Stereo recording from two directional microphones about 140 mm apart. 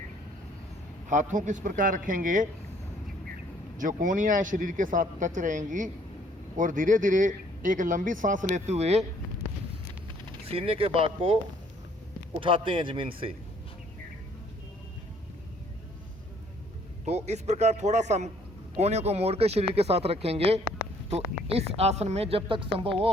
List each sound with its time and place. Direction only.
1.1 s speech: 65° right (ahead or behind)
3.8 s speech: 70° right (ahead or behind); by 9.0 s 50° right (ahead or behind)
10.4 s a woman's voice: 45° right (ahead or behind)
12.4 s a man's voice: 35° right (ahead or behind)
17.1 s a woman's voice: 50° right (ahead or behind)